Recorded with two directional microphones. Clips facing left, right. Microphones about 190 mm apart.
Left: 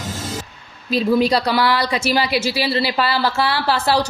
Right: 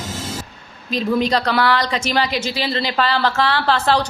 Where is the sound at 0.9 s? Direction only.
5° left (ahead or behind).